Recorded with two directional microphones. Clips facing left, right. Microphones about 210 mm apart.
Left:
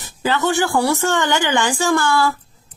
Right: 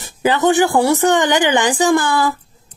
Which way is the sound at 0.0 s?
15° right (ahead or behind).